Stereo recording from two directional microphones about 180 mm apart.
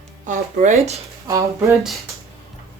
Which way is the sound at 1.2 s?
15° right (ahead or behind).